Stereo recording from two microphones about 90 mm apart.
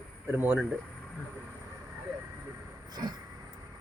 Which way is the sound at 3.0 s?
45° right (ahead or behind).